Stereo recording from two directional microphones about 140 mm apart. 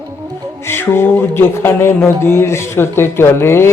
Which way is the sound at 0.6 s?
15° left (ahead or behind).